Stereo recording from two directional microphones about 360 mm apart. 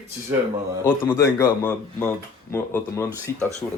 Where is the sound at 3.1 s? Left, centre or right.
Centre.